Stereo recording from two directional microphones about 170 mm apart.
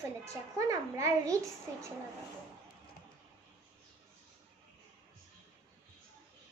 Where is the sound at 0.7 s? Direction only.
20° right (ahead or behind).